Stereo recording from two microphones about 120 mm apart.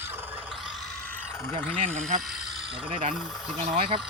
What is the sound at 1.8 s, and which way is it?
Speech, 85° right.